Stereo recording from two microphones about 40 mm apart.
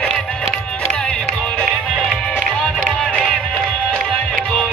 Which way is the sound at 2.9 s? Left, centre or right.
Left.